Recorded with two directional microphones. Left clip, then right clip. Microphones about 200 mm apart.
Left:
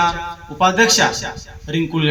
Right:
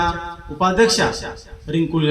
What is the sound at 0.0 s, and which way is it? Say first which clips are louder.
A man's voice: left 3 dB; 25° left (ahead or behind).